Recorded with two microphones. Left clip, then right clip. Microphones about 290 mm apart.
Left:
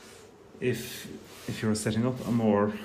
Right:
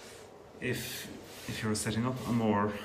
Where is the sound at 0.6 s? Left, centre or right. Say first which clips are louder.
Left 5 dB; centre.